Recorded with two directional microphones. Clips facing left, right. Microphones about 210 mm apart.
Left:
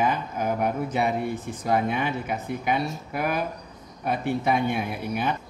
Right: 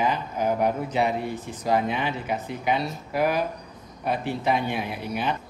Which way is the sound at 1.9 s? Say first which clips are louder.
Even; 50° left (ahead or behind).